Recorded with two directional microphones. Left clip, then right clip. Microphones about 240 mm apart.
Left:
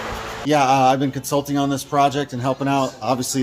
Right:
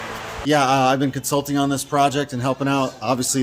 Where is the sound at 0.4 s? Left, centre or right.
Centre.